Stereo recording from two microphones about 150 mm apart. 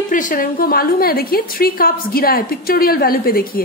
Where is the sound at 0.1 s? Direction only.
65° left (ahead or behind).